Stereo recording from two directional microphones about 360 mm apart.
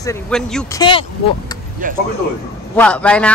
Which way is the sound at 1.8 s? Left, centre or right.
Right.